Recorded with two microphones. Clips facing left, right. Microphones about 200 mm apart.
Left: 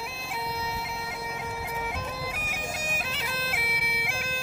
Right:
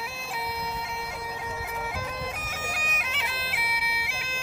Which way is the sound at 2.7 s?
30° left (ahead or behind).